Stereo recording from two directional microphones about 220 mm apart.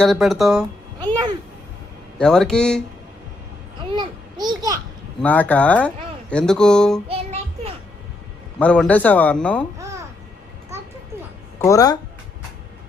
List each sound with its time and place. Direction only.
0.0 s speech: centre (ahead or behind)
0.9 s a sound: 20° right (ahead or behind)
2.1 s speech: centre (ahead or behind)
3.9 s a sound: 20° right (ahead or behind)
5.2 s a man's voice: 5° left (ahead or behind)
7.1 s music: 25° right (ahead or behind)
8.5 s a man's voice: 5° left (ahead or behind)
11.6 s a man's voice: 15° left (ahead or behind)